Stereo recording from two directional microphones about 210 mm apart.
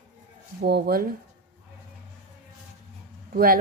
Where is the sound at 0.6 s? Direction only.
50° right (ahead or behind).